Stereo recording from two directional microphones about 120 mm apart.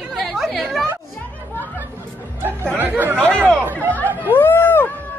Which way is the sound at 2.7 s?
15° right (ahead or behind).